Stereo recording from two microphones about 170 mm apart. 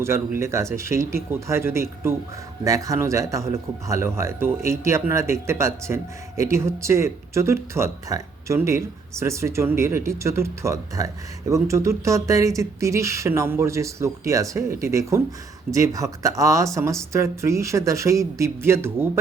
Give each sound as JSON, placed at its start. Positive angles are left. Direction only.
{"t": 0.0, "sound": "a man's voice", "side_deg": -15}